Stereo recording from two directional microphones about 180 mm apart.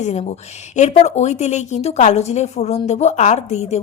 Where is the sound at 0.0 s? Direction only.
40° left (ahead or behind).